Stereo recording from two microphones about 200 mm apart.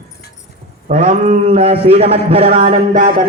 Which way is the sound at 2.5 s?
45° right (ahead or behind).